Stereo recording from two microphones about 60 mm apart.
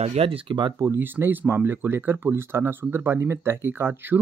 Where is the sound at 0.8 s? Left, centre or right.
Right.